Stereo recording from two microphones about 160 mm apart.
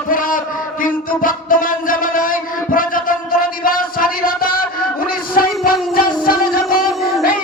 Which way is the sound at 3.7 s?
65° left (ahead or behind).